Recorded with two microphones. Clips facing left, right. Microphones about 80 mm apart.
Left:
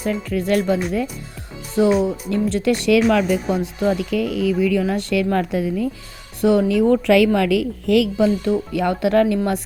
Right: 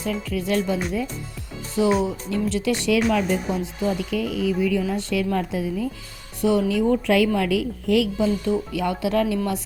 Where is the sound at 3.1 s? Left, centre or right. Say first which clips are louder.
Left 4 dB; left.